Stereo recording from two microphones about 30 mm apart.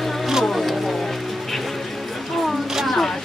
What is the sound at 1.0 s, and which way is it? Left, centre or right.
Music, centre.